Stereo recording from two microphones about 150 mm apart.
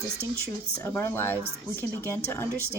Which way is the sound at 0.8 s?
15° left (ahead or behind).